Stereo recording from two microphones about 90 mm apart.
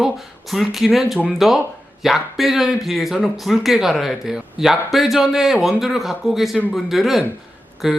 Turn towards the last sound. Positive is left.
turn(degrees=-5)  # may be behind; listen again after turning